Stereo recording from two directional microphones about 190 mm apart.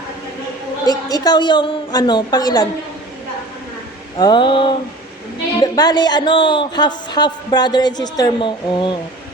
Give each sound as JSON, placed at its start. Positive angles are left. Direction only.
{"t": 0.9, "sound": "a woman's voice", "side_deg": 20}
{"t": 4.2, "sound": "a woman's voice", "side_deg": 25}